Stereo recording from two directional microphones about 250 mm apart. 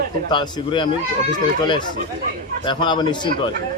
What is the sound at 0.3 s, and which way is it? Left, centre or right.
Speech, centre.